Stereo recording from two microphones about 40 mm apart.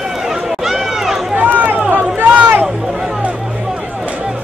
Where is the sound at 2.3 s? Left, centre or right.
Right.